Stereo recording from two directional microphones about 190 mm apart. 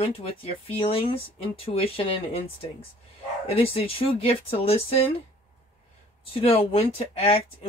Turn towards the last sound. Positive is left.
turn(degrees=30)  # may be behind; listen again after turning